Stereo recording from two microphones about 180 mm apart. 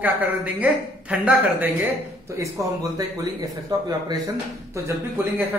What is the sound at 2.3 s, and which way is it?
Speech, 20° right (ahead or behind).